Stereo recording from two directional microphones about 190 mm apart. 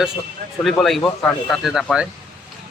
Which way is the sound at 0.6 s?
Centre (ahead or behind).